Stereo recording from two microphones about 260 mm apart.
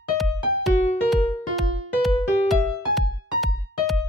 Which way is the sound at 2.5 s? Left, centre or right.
Centre.